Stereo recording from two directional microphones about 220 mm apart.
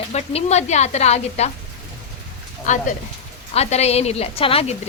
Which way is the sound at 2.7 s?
35° left (ahead or behind).